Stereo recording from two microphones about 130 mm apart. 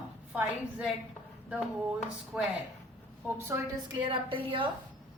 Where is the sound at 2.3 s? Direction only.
10° right (ahead or behind).